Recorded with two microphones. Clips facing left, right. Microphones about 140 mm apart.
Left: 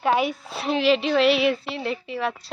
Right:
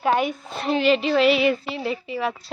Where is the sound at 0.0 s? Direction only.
Centre (ahead or behind).